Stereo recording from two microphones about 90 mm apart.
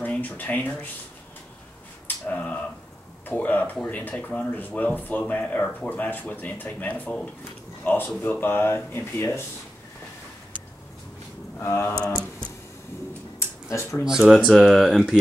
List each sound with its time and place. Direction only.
0.0 s speech: 20° left (ahead or behind)
2.2 s a sound: 15° left (ahead or behind)
3.3 s speech: 15° left (ahead or behind)
11.6 s speech: 25° left (ahead or behind)
13.4 s a sound: 30° left (ahead or behind)
14.0 s speech: 5° right (ahead or behind)
14.5 s speech: 5° left (ahead or behind)